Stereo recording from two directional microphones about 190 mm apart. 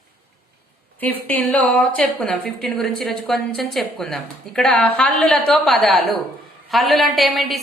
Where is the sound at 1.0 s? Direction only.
10° left (ahead or behind).